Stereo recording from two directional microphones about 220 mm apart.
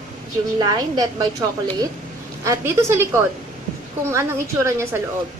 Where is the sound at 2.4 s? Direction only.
15° right (ahead or behind).